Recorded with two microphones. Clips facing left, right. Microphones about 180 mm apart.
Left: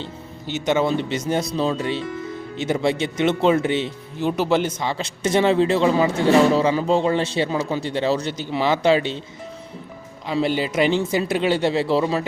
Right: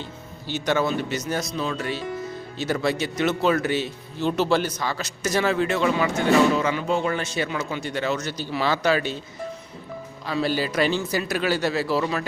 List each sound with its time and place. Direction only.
0.0 s speech: 20° left (ahead or behind)
10.2 s speech: 20° left (ahead or behind)